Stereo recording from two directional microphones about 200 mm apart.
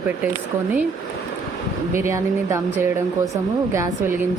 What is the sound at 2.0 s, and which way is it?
Speech, 15° right (ahead or behind).